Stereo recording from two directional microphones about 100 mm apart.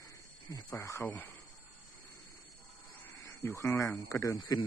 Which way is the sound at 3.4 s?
25° left (ahead or behind).